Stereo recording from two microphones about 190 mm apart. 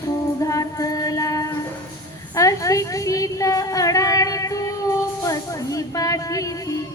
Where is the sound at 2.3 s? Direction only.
15° left (ahead or behind).